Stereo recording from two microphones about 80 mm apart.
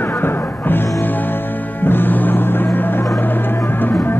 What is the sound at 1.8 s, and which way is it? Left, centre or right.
Music, left.